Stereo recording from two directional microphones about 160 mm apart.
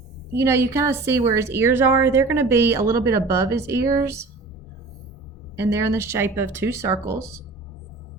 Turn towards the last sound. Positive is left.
turn(degrees=-20)  # may be behind; listen again after turning